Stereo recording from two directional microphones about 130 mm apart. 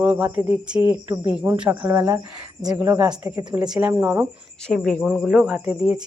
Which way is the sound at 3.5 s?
5° right (ahead or behind).